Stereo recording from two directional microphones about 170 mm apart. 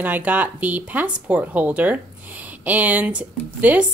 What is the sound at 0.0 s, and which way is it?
Speech, 10° right (ahead or behind).